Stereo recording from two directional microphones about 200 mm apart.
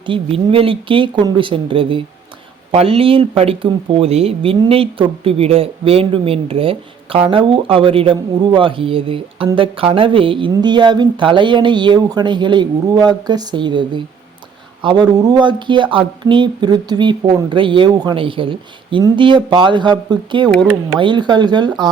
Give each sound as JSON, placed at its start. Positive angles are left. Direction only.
{"t": 0.0, "sound": "speech", "side_deg": -25}